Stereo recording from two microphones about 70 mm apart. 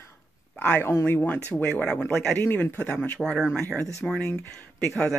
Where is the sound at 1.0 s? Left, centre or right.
Left.